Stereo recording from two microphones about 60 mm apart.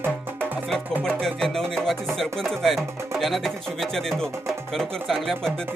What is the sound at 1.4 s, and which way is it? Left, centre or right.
Music, centre.